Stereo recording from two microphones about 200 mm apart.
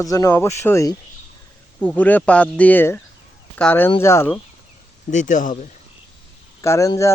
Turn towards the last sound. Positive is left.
turn(degrees=15)  # may be behind; listen again after turning